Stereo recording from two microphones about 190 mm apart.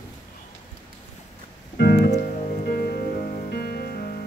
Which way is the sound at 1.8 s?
60° left (ahead or behind).